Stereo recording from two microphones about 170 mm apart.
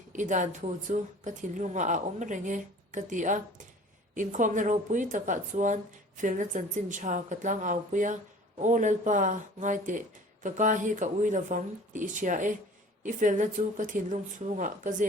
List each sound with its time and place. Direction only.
0.1 s a woman's voice: 45° right (ahead or behind)